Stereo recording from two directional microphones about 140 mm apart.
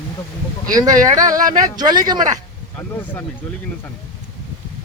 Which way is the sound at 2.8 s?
20° left (ahead or behind).